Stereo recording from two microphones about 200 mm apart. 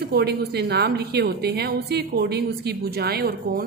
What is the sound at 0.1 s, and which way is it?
A woman's voice, 55° right (ahead or behind).